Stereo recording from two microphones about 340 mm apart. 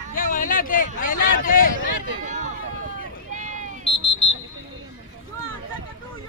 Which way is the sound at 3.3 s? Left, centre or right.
Right.